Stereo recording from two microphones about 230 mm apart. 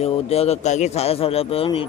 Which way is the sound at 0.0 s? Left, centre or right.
Left.